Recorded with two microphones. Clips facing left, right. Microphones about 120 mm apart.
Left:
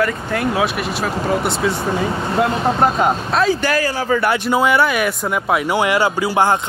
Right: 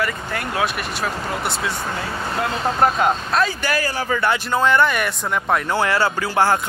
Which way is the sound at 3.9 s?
30° left (ahead or behind).